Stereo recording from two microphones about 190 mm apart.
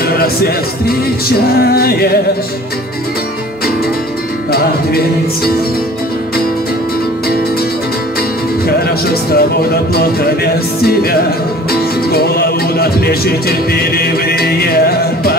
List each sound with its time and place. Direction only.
0.0 s speech: 55° left (ahead or behind)
1.7 s music: 55° left (ahead or behind)
4.5 s music: 55° left (ahead or behind)
8.6 s music: 55° left (ahead or behind)